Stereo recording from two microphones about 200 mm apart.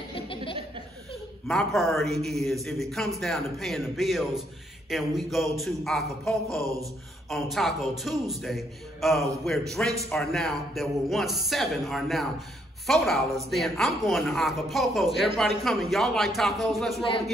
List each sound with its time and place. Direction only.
0.1 s laughter: 25° left (ahead or behind)
1.5 s a woman's voice: centre (ahead or behind)
6.6 s speech: 15° right (ahead or behind)
7.2 s a woman's voice: centre (ahead or behind)